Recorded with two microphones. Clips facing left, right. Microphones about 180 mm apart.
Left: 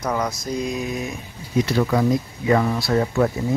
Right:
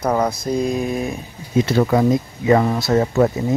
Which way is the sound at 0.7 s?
30° right (ahead or behind).